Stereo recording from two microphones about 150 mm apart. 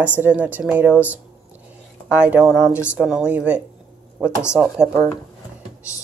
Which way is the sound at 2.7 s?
15° left (ahead or behind).